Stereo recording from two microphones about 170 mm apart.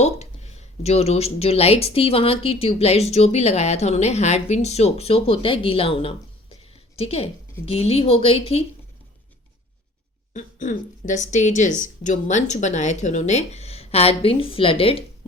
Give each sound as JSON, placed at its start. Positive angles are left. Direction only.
{"t": 0.0, "sound": "a woman's voice", "side_deg": 40}
{"t": 10.3, "sound": "speech", "side_deg": 45}